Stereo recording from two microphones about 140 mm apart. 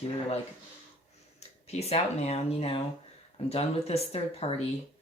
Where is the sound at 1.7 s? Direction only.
50° left (ahead or behind).